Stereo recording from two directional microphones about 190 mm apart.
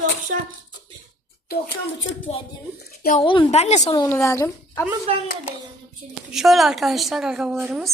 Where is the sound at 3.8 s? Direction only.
20° left (ahead or behind).